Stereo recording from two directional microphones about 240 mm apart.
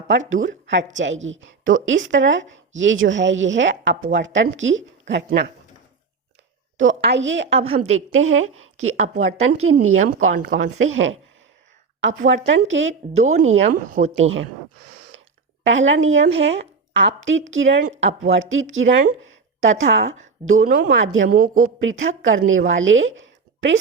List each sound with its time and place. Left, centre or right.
0.1 s a woman's voice: right
6.7 s a woman's voice: right
12.3 s a woman's voice: right
14.0 s a woman's voice: right
15.6 s a woman's voice: right